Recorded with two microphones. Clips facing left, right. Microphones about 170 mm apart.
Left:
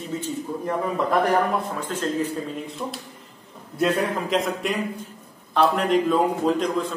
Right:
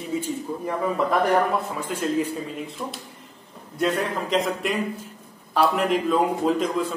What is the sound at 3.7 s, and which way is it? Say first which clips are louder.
A man's voice: left 2 dB; centre (ahead or behind).